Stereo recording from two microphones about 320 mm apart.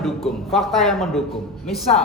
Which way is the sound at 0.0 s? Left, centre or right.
Centre.